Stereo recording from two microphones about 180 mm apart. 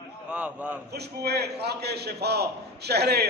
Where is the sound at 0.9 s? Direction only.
65° right (ahead or behind).